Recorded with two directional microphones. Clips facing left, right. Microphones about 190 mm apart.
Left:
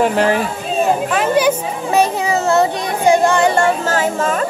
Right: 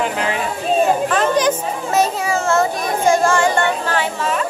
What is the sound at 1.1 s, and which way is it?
A child's voice, 10° left (ahead or behind).